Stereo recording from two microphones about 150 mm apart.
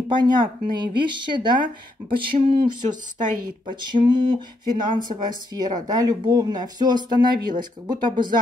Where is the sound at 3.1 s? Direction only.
55° right (ahead or behind).